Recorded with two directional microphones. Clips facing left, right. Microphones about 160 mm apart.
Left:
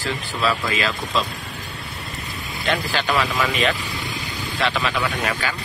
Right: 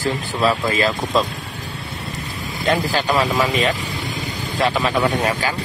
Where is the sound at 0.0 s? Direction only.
40° right (ahead or behind).